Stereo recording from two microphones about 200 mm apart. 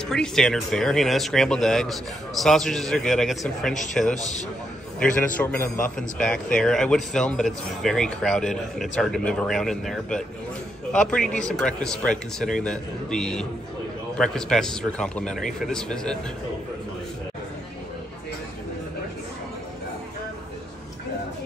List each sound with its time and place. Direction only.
0.0 s a man's voice: 5° left (ahead or behind)
4.1 s a man's voice: 35° left (ahead or behind)
5.0 s a man's voice: 5° left (ahead or behind)